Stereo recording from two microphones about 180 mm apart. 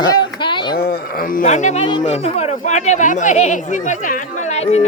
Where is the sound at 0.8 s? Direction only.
55° left (ahead or behind).